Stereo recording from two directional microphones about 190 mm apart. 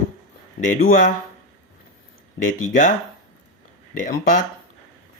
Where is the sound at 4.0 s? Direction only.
45° left (ahead or behind).